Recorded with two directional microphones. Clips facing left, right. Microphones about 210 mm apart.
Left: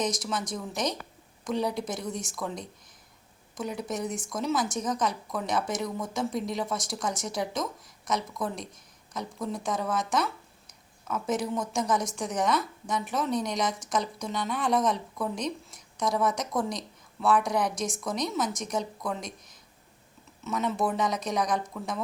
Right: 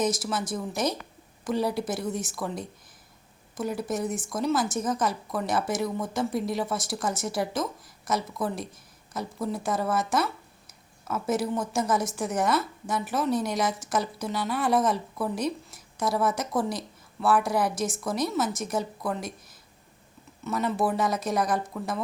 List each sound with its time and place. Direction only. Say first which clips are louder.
0.0 s speech: right 3 dB; 5° right (ahead or behind)